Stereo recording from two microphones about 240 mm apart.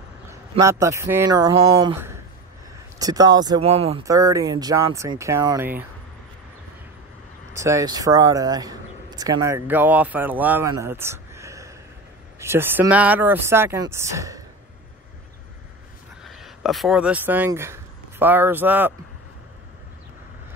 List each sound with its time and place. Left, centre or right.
0.3 s speech: centre
4.0 s speech: centre
7.5 s speech: centre
16.3 s speech: centre